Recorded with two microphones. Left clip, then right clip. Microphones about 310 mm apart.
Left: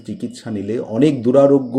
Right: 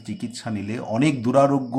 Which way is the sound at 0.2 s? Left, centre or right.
Centre.